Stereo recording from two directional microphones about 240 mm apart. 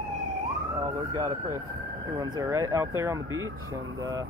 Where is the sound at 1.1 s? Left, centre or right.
Centre.